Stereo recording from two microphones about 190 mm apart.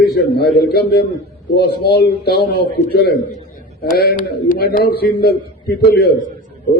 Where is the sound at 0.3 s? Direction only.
55° left (ahead or behind).